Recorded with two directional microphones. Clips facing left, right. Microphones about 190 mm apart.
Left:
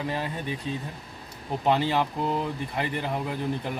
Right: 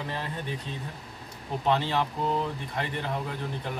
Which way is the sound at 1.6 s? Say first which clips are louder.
Left 3 dB; 10° left (ahead or behind).